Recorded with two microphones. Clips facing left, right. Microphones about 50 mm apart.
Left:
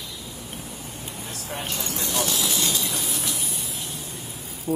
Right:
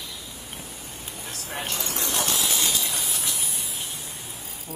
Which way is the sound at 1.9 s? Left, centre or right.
Right.